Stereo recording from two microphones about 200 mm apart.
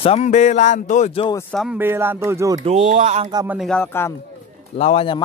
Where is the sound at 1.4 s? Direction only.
5° left (ahead or behind).